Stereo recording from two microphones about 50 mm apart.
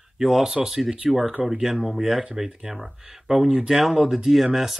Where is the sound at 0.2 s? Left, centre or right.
Centre.